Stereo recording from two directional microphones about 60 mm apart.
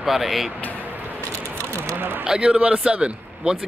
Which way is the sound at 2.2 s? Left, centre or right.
Centre.